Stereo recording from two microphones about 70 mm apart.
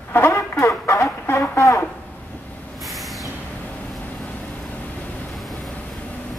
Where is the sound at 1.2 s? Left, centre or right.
Left.